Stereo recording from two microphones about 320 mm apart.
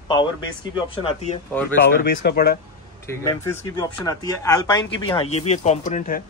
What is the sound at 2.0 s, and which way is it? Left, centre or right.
Speech, left.